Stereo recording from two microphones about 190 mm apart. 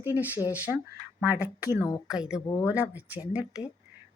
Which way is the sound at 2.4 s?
20° left (ahead or behind).